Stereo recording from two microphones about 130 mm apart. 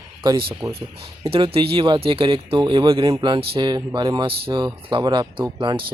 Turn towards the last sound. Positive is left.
turn(degrees=-40)  # may be behind; listen again after turning